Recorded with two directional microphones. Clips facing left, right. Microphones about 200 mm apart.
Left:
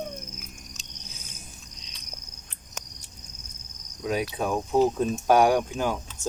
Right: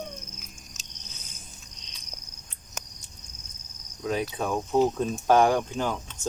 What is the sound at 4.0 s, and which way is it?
Cricket, 10° left (ahead or behind).